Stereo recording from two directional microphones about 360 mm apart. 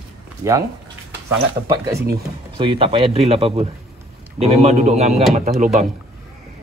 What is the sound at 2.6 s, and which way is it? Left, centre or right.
Speech, centre.